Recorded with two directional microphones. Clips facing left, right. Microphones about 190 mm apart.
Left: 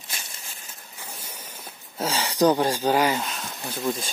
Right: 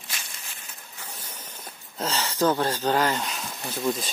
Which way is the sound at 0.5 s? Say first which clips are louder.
Left 1 dB; 40° left (ahead or behind).